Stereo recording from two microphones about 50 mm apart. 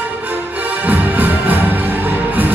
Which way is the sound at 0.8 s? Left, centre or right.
Right.